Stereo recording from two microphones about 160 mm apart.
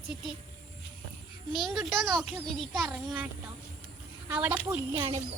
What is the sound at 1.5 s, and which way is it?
Speech, centre (ahead or behind).